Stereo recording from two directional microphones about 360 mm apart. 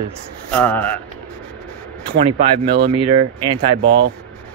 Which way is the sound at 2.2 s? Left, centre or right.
Centre.